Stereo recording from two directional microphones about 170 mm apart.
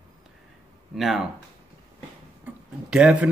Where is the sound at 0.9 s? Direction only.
Centre (ahead or behind).